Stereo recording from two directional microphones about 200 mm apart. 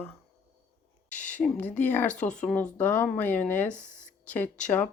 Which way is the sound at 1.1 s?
10° left (ahead or behind).